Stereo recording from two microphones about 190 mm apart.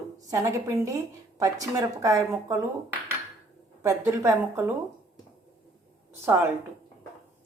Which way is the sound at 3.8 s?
15° right (ahead or behind).